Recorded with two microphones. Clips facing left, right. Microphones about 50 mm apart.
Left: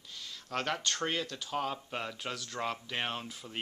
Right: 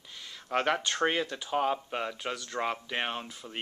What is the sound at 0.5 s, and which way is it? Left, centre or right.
Speech, right.